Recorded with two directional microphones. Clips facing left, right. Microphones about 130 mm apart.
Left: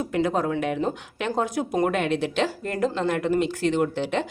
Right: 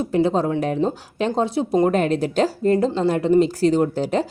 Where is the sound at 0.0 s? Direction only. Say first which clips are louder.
Right 5 dB; 30° right (ahead or behind).